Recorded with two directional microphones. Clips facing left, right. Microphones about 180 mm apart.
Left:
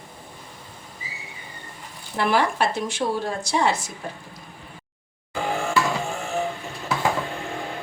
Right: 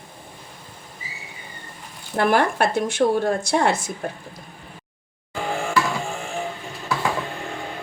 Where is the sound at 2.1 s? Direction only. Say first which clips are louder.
Right 3 dB; 50° right (ahead or behind).